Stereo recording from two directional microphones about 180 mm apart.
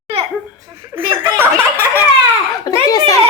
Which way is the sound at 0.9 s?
10° right (ahead or behind).